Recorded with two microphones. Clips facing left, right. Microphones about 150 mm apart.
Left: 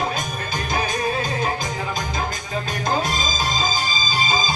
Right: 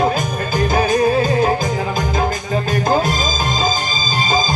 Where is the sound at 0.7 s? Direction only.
45° right (ahead or behind).